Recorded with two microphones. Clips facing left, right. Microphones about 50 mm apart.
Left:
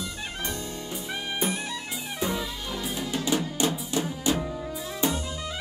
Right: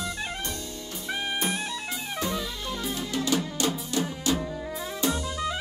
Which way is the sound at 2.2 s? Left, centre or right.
Centre.